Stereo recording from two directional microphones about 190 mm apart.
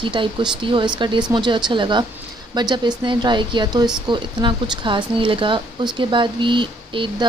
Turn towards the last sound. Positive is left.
turn(degrees=-25)  # may be behind; listen again after turning